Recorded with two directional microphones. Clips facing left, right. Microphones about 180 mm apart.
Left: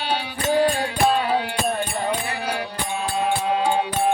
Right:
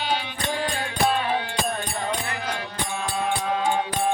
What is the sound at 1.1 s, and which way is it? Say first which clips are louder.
Music: left 3 dB; 35° left (ahead or behind).